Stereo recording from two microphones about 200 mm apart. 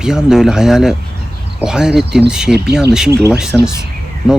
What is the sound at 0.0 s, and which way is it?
Speech, 5° right (ahead or behind).